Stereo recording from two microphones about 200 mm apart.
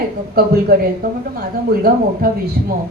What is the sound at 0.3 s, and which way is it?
A woman's voice, 50° right (ahead or behind).